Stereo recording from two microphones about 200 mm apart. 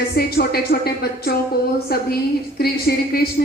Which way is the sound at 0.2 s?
50° left (ahead or behind).